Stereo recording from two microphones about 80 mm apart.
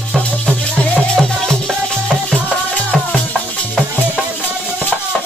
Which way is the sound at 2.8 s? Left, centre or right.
Centre.